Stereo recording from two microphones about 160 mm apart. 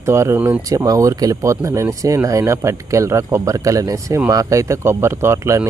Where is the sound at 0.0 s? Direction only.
15° right (ahead or behind).